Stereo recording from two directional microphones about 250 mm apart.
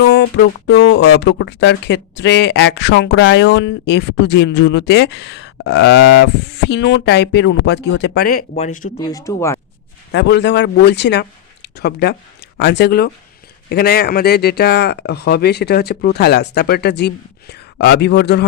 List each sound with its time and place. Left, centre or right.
0.0 s speech: left
9.0 s speech: centre
10.1 s speech: left